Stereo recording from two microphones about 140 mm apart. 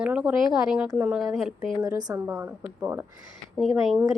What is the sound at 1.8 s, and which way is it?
Speech, 30° right (ahead or behind).